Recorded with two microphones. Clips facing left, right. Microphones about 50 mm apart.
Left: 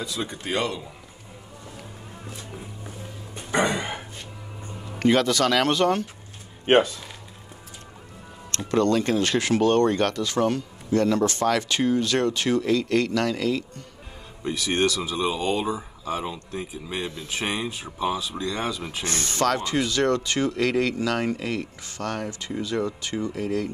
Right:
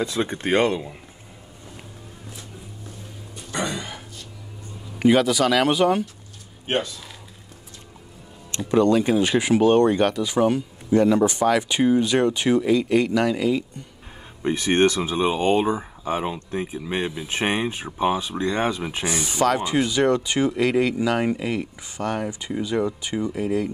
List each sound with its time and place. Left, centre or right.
0.0 s speech: right
3.3 s a sound: left
4.9 s speech: centre
6.6 s speech: left
8.5 s speech: centre
14.4 s speech: right
19.0 s speech: centre